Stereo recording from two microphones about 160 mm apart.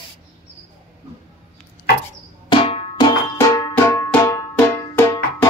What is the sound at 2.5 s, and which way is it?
Drum, 35° left (ahead or behind).